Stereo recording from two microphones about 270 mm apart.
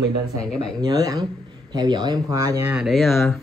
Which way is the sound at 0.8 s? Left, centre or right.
Centre.